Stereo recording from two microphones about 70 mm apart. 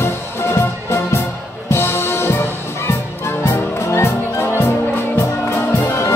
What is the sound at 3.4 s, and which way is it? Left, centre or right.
Music, left.